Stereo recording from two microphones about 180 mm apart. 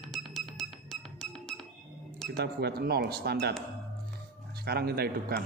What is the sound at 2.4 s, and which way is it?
Speech, 65° right (ahead or behind).